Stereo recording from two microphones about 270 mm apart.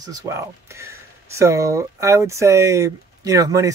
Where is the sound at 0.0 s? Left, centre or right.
Centre.